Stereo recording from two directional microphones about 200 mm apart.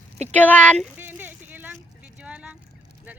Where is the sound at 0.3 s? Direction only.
5° left (ahead or behind).